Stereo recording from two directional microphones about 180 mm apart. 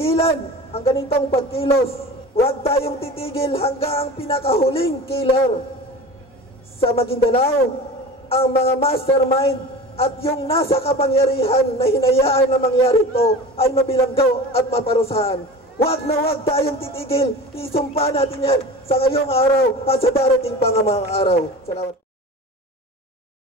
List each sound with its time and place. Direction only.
0.0 s a man's voice: 35° left (ahead or behind)
6.8 s a man's voice: 30° left (ahead or behind)